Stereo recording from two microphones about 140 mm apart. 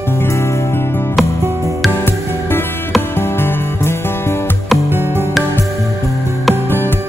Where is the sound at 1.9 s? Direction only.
15° left (ahead or behind).